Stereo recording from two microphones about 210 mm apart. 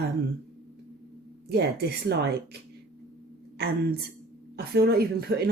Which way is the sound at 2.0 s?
50° right (ahead or behind).